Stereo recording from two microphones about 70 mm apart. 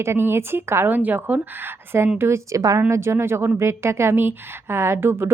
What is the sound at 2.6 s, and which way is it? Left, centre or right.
Speech, right.